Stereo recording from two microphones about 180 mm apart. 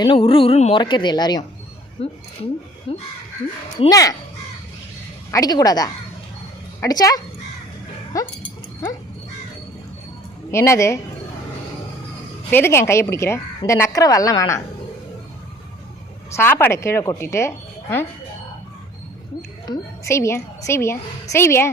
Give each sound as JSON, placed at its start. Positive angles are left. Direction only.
{"t": 0.0, "sound": "speech", "side_deg": 30}
{"t": 2.0, "sound": "speech", "side_deg": 35}
{"t": 3.8, "sound": "speech", "side_deg": 20}
{"t": 5.3, "sound": "speech", "side_deg": 20}
{"t": 10.5, "sound": "a woman's voice", "side_deg": 15}
{"t": 12.5, "sound": "a woman's voice", "side_deg": 15}
{"t": 16.3, "sound": "a woman's voice", "side_deg": 10}
{"t": 19.6, "sound": "a woman's voice", "side_deg": 20}